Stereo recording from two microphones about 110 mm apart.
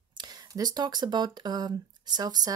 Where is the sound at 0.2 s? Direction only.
40° right (ahead or behind).